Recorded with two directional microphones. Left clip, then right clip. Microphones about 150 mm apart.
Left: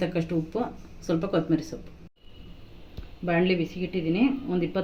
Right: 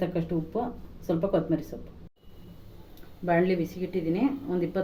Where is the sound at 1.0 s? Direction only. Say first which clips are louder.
Even; 90° left.